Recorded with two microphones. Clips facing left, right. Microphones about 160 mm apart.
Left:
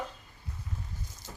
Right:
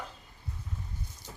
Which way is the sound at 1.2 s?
90° left.